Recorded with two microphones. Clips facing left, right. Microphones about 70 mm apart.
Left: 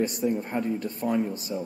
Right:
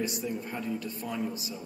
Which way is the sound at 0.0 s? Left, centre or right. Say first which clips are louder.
Left 7 dB; left.